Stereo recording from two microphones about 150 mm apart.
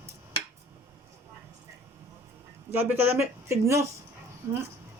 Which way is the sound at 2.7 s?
15° right (ahead or behind).